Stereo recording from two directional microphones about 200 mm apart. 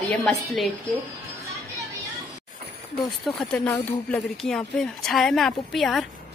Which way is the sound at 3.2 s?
Centre (ahead or behind).